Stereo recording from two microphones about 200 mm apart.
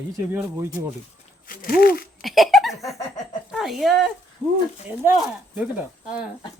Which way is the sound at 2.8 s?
15° left (ahead or behind).